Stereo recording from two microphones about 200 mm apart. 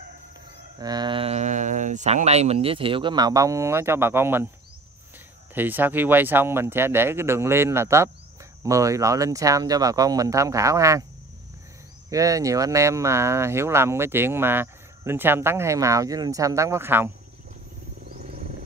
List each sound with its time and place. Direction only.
0.7 s speech: 20° right (ahead or behind)
5.5 s speech: 10° right (ahead or behind)
12.1 s speech: 15° right (ahead or behind)